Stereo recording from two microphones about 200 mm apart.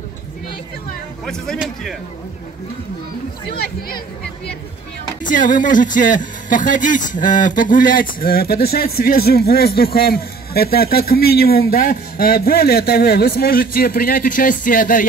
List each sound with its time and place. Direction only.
1.2 s a man's voice: 5° left (ahead or behind)
3.4 s speech: 50° left (ahead or behind)
5.2 s speech: 40° left (ahead or behind)